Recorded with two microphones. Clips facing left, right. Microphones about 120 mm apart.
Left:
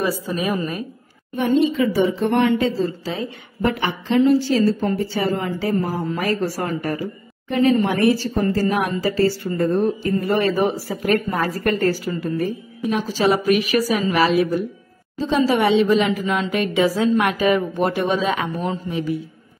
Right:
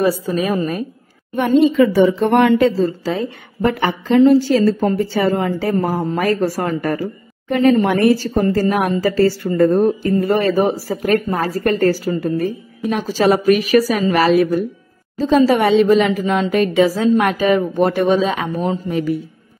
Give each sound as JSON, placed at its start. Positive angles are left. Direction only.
{"t": 1.3, "sound": "a woman's voice", "side_deg": -70}
{"t": 2.8, "sound": "a woman's voice", "side_deg": -40}
{"t": 5.9, "sound": "a woman's voice", "side_deg": -55}
{"t": 18.9, "sound": "a woman's voice", "side_deg": -50}